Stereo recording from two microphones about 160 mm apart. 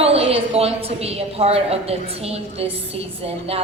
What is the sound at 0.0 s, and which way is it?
A woman's voice, 40° right (ahead or behind).